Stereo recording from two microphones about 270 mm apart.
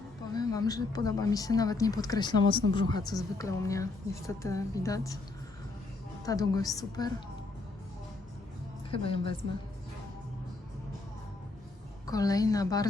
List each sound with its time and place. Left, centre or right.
0.3 s speech: centre
6.2 s speech: centre
8.9 s a woman's voice: centre
12.0 s speech: centre